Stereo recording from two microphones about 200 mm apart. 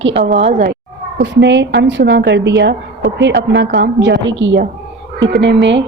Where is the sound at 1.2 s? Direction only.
60° right (ahead or behind).